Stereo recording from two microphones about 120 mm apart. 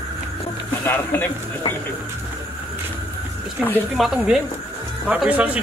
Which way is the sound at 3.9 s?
5° right (ahead or behind).